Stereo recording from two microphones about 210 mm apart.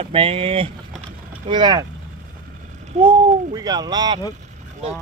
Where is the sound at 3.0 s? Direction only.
20° right (ahead or behind).